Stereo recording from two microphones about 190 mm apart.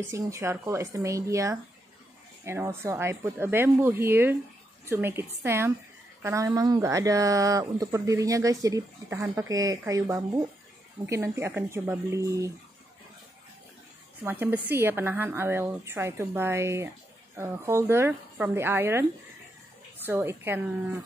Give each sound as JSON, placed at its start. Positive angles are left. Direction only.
{"t": 0.0, "sound": "speech", "side_deg": -15}
{"t": 14.2, "sound": "speech", "side_deg": -10}
{"t": 20.1, "sound": "speech", "side_deg": -10}